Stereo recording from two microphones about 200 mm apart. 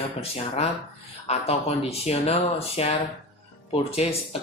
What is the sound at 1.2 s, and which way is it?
Speech, 30° left (ahead or behind).